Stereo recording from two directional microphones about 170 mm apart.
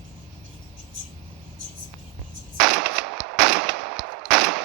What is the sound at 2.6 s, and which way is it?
Machine gun, centre (ahead or behind).